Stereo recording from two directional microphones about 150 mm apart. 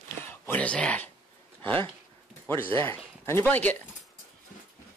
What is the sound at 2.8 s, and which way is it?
Speech, 15° left (ahead or behind).